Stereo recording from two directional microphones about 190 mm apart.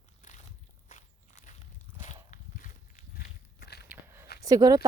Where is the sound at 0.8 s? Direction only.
40° left (ahead or behind).